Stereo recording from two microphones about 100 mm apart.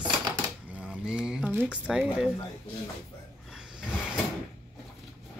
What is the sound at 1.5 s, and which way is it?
Music, 20° right (ahead or behind).